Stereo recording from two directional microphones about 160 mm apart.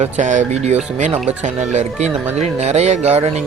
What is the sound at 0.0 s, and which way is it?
Speech, 50° right (ahead or behind).